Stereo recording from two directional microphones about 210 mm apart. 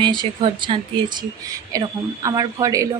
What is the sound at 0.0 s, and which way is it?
A woman's voice, 20° right (ahead or behind).